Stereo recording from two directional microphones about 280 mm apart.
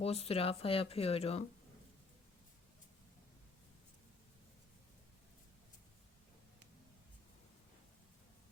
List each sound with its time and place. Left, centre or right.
0.0 s speech: left